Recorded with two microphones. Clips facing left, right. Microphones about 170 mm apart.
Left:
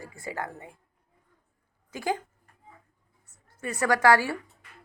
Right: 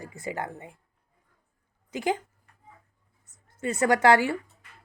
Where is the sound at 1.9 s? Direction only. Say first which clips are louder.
Right 2 dB; 20° right (ahead or behind).